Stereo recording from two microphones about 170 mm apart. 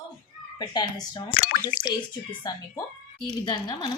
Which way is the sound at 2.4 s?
25° left (ahead or behind).